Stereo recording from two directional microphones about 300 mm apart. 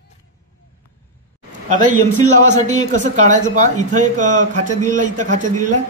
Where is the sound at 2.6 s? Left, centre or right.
Right.